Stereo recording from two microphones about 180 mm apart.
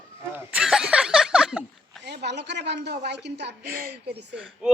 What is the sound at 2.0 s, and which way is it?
A woman's voice, 70° right (ahead or behind).